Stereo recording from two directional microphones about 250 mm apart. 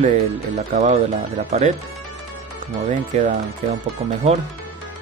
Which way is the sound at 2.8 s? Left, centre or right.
Right.